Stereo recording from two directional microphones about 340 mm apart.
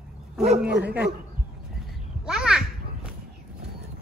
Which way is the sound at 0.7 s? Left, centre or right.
Right.